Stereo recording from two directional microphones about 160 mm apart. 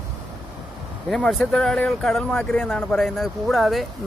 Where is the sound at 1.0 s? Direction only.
Centre (ahead or behind).